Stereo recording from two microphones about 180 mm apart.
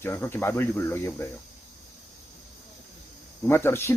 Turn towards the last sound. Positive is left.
turn(degrees=15)  # may be behind; listen again after turning